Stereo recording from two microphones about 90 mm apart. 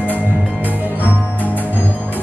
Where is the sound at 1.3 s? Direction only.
20° left (ahead or behind).